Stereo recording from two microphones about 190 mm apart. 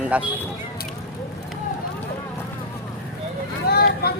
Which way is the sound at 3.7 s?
55° left (ahead or behind).